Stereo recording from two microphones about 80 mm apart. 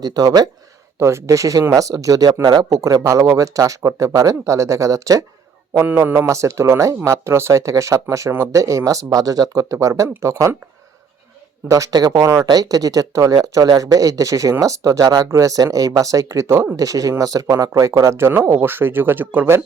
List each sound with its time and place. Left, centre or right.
0.0 s speech: right
0.9 s speech: right
5.9 s speech: right
11.7 s speech: right
12.2 s speech: right
12.5 s speech: right